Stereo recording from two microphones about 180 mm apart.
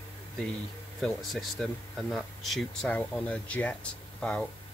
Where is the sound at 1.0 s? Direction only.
Centre (ahead or behind).